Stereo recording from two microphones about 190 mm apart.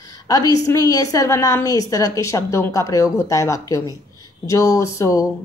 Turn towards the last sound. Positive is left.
turn(degrees=15)  # may be behind; listen again after turning